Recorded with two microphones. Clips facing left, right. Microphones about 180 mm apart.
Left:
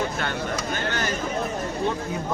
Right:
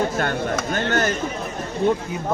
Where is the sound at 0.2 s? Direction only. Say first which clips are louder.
Right 5 dB; 50° right (ahead or behind).